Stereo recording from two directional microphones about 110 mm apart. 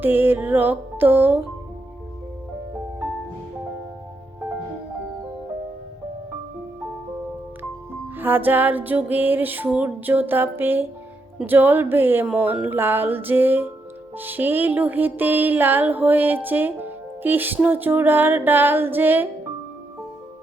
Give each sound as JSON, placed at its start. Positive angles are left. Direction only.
{"t": 0.0, "sound": "music", "side_deg": -20}
{"t": 8.1, "sound": "music", "side_deg": -20}
{"t": 11.3, "sound": "speech", "side_deg": -15}
{"t": 14.2, "sound": "music", "side_deg": -15}